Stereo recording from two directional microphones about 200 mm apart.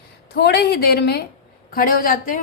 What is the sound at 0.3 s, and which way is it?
A woman's voice, 55° left (ahead or behind).